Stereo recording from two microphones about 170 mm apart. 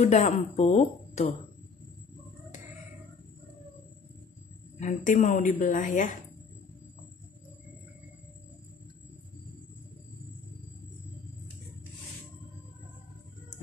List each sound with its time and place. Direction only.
0.0 s speech: 40° left (ahead or behind)
4.7 s a woman's voice: 45° left (ahead or behind)